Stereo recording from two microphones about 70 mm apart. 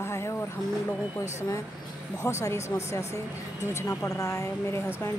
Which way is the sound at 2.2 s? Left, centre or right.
Left.